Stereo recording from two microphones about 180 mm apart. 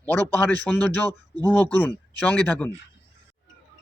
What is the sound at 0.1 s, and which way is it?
Speech, 10° left (ahead or behind).